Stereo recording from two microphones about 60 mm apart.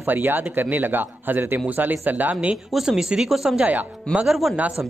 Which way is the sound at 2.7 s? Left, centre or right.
Centre.